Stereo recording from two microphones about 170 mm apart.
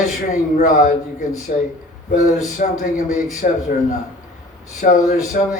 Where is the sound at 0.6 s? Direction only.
50° left (ahead or behind).